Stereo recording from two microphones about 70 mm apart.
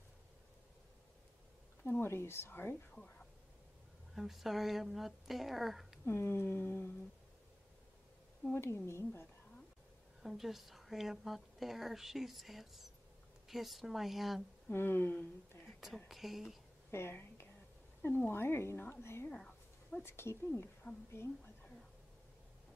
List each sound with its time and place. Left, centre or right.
1.9 s a woman's voice: left
2.9 s speech: centre
4.1 s a woman's voice: centre
6.0 s a woman's voice: left
8.5 s a woman's voice: left
10.2 s a woman's voice: centre
14.7 s a woman's voice: left
16.1 s a woman's voice: centre
16.9 s a woman's voice: left
19.2 s a sound: centre
20.0 s a woman's voice: left